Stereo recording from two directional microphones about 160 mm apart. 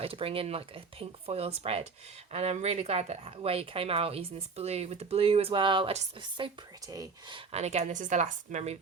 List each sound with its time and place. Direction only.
0.0 s speech: 35° right (ahead or behind)
6.3 s speech: 25° right (ahead or behind)
7.5 s a woman's voice: 45° right (ahead or behind)